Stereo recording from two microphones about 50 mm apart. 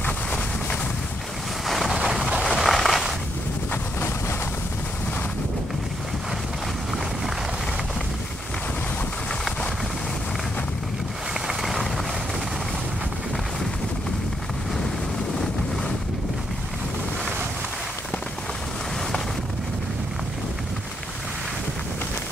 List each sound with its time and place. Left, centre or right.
0.0 s vehicle: left
1.7 s boat: centre
2.4 s a sound: centre
3.7 s vehicle: left
11.4 s vehicle: centre